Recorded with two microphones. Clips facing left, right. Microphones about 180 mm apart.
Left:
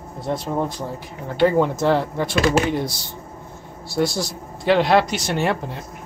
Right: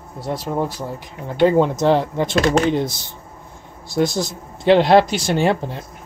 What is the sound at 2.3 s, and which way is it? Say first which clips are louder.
Speech: right 1 dB; 5° left (ahead or behind).